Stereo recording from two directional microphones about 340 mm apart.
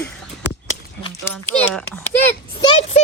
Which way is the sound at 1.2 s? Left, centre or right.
Centre.